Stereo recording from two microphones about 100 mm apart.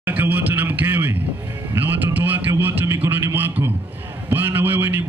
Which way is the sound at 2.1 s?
20° right (ahead or behind).